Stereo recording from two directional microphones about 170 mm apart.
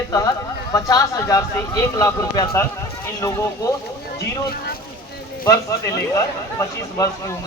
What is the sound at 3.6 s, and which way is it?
Speech, 20° left (ahead or behind).